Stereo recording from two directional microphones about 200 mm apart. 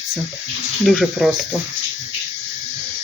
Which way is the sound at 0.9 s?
Centre (ahead or behind).